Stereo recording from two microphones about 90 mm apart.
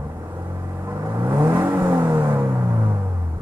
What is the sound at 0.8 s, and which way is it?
Vehicle, 25° right (ahead or behind).